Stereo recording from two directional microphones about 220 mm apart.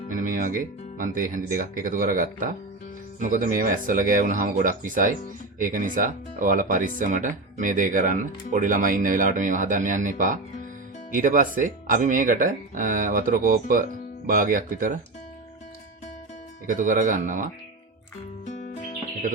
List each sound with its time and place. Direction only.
0.1 s speech: 40° right (ahead or behind)
16.6 s speech: 35° right (ahead or behind)
18.4 s music: 35° left (ahead or behind)